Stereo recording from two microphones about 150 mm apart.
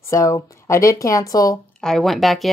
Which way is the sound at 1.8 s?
Centre (ahead or behind).